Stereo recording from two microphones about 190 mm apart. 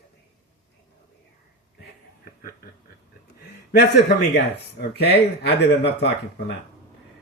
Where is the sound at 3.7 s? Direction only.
60° left (ahead or behind).